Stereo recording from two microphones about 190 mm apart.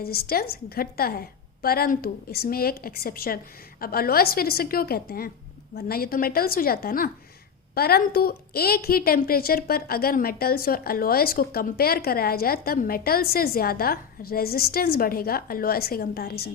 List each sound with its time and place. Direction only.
0.0 s a woman's voice: 55° left (ahead or behind)